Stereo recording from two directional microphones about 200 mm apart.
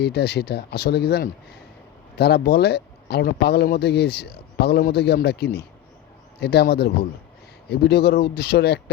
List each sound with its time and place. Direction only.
0.0 s speech: 55° left (ahead or behind)